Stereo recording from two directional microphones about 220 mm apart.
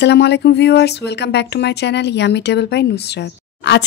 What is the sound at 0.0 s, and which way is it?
Speech, 50° left (ahead or behind).